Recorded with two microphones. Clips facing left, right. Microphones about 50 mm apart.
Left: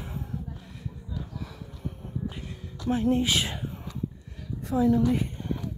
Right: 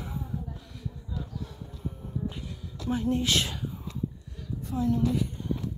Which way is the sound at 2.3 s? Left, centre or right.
Left.